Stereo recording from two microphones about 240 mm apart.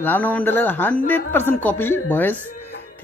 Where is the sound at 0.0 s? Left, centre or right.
Centre.